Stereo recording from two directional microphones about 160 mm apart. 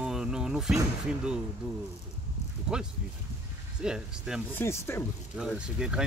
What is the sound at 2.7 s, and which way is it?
Speech, 5° right (ahead or behind).